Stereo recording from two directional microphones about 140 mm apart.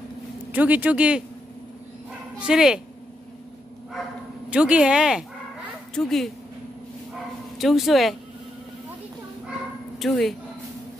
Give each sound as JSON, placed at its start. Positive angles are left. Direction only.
{"t": 0.5, "sound": "speech", "side_deg": -10}
{"t": 2.3, "sound": "speech", "side_deg": -5}
{"t": 4.5, "sound": "speech", "side_deg": -5}
{"t": 7.5, "sound": "speech", "side_deg": 0}
{"t": 9.9, "sound": "speech", "side_deg": 0}